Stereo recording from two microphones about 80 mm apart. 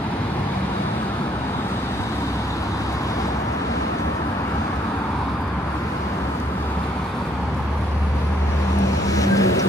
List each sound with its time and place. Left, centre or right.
9.1 s vehicle: left